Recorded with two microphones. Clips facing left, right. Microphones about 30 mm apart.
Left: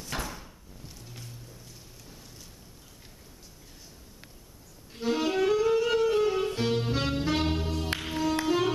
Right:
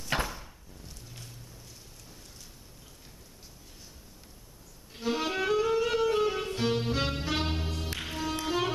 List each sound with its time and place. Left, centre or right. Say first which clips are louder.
0.1 s door: right 4 dB; right
4.9 s saxophone: left 3 dB; centre
8.0 s music: left 4 dB; centre